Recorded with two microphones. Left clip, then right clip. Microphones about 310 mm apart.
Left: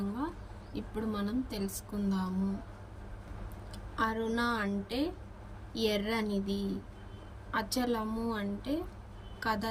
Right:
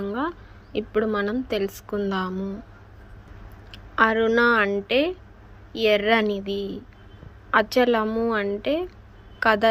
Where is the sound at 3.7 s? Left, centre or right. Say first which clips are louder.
Right 13 dB; centre.